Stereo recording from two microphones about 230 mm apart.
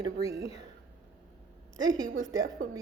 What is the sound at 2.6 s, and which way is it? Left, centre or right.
Speech, right.